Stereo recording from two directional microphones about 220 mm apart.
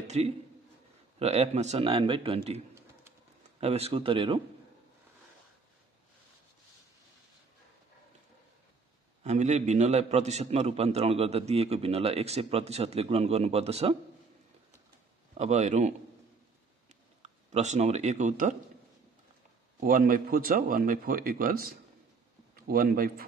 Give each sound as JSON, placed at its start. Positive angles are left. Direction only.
{"t": 0.0, "sound": "a man's voice", "side_deg": -30}
{"t": 3.6, "sound": "a man's voice", "side_deg": -30}
{"t": 9.2, "sound": "a man's voice", "side_deg": -30}
{"t": 15.3, "sound": "a man's voice", "side_deg": -30}
{"t": 17.2, "sound": "speech", "side_deg": -30}
{"t": 19.8, "sound": "a man's voice", "side_deg": -40}